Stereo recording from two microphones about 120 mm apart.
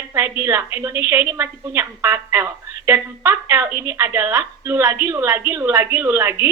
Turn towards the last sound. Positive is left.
turn(degrees=-20)  # may be behind; listen again after turning